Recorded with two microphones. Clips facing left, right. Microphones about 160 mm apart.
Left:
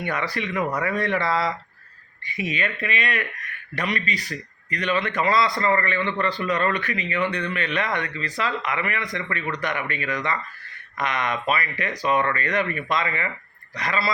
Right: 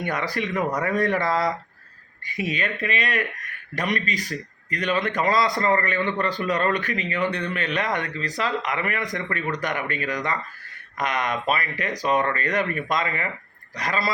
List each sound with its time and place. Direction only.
0.0 s speech: 45° right (ahead or behind)